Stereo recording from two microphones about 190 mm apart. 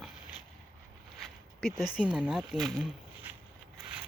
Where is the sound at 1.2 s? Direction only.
Centre (ahead or behind).